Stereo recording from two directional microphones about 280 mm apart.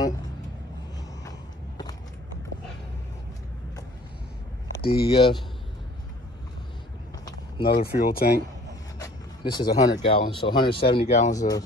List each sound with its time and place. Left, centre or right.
4.8 s speech: centre
7.6 s speech: left
9.0 s a sound: centre
10.0 s speech: centre
11.3 s speech: centre